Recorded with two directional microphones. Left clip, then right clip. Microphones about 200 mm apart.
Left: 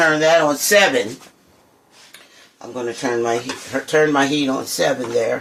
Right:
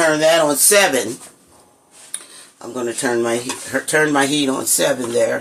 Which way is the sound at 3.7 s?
25° right (ahead or behind).